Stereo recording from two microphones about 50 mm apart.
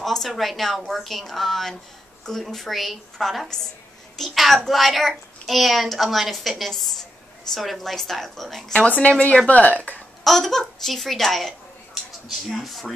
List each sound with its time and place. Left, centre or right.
0.0 s speech: centre
8.7 s speech: left
10.2 s speech: centre